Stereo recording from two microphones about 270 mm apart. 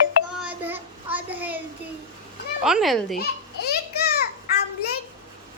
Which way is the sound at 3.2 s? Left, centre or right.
Left.